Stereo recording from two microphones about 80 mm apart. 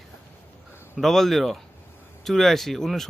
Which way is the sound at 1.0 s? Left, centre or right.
Centre.